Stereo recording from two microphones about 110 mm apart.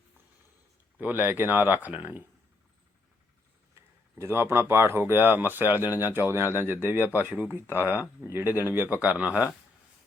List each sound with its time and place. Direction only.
0.9 s speech: 15° right (ahead or behind)
3.8 s speech: 25° right (ahead or behind)
7.8 s speech: 25° left (ahead or behind)
8.2 s speech: 20° right (ahead or behind)